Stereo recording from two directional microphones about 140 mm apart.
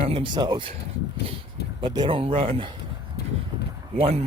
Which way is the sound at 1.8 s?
35° right (ahead or behind).